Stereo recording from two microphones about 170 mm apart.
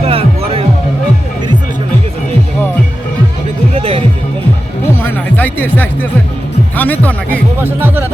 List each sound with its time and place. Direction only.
0.0 s music: 35° right (ahead or behind)
3.8 s music: 35° right (ahead or behind)
5.0 s music: 10° left (ahead or behind)
6.7 s speech: 10° left (ahead or behind)
7.6 s speech: 10° right (ahead or behind)